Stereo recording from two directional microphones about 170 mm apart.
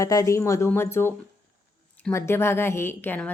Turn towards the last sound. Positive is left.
turn(degrees=10)  # may be behind; listen again after turning